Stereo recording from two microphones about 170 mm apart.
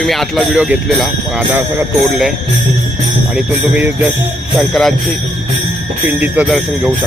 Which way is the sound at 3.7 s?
10° right (ahead or behind).